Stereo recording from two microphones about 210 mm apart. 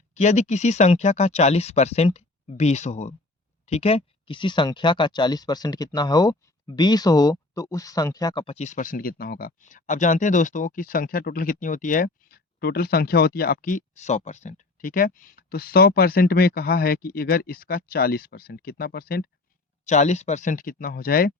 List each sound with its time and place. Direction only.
0.1 s speech: 35° left (ahead or behind)
19.8 s speech: 35° left (ahead or behind)